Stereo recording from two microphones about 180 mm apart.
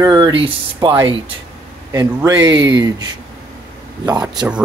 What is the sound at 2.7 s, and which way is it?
Speech, 20° right (ahead or behind).